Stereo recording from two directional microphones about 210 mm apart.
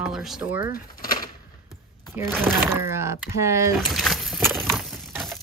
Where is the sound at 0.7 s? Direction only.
45° left (ahead or behind).